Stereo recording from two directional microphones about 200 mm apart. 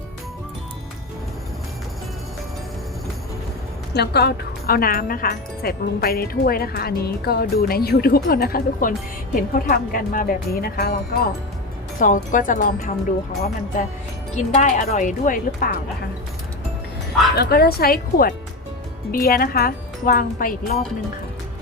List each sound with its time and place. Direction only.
3.9 s speech: 55° left (ahead or behind)
11.9 s speech: 40° left (ahead or behind)
17.3 s speech: 50° left (ahead or behind)